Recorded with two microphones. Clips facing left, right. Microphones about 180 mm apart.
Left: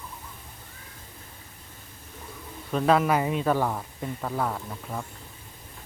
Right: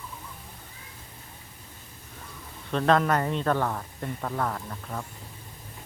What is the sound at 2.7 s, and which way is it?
Speech, 5° left (ahead or behind).